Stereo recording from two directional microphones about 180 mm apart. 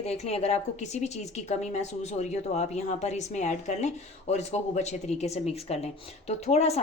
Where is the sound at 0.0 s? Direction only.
35° left (ahead or behind).